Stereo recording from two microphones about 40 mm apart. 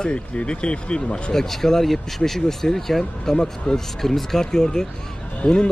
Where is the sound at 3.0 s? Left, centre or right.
Left.